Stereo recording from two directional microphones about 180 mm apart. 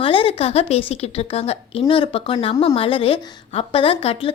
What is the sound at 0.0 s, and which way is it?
Speech, 30° left (ahead or behind).